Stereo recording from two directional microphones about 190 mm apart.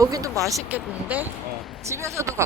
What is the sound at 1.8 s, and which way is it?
Speech, 15° right (ahead or behind).